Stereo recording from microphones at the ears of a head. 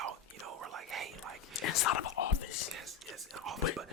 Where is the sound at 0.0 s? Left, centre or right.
Right.